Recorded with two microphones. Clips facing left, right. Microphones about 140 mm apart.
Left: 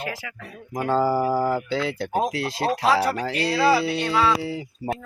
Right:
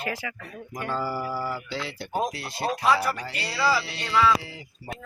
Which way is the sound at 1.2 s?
55° left (ahead or behind).